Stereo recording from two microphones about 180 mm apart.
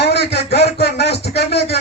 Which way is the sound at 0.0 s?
65° left (ahead or behind).